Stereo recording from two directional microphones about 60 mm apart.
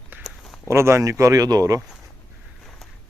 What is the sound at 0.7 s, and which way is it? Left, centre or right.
Speech, right.